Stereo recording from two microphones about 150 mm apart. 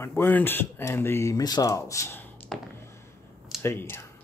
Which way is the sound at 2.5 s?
Centre (ahead or behind).